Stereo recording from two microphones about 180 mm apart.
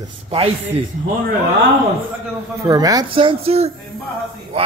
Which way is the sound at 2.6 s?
20° right (ahead or behind).